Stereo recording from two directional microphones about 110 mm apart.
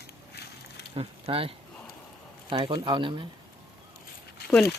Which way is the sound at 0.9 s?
60° right (ahead or behind).